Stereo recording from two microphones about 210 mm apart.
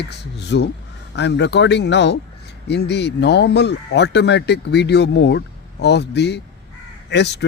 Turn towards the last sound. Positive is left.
turn(degrees=55)  # may be behind; listen again after turning